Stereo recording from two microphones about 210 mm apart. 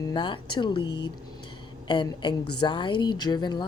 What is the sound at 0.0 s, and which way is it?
A woman's voice, 20° left (ahead or behind).